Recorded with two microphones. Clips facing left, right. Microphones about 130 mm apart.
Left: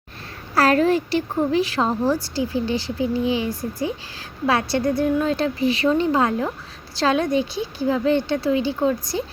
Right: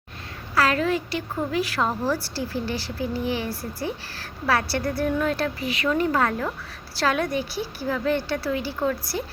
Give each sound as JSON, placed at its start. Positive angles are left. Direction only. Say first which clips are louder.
{"t": 0.5, "sound": "a woman's voice", "louder": "left 5 dB", "side_deg": 40}